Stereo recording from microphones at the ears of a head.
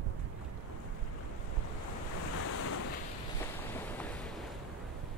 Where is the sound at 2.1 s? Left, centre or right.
Left.